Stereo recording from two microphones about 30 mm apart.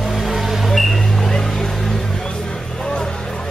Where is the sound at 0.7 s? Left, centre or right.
Centre.